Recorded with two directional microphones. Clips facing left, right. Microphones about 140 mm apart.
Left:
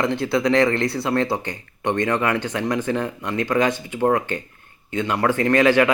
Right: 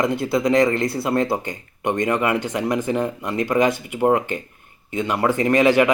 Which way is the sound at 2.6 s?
20° right (ahead or behind).